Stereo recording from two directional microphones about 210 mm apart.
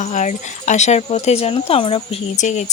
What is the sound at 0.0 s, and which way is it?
Speech, 35° left (ahead or behind).